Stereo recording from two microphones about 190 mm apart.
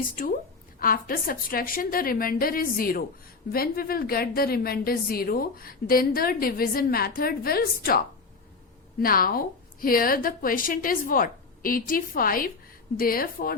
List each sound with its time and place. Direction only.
0.0 s a woman's voice: 45° left (ahead or behind)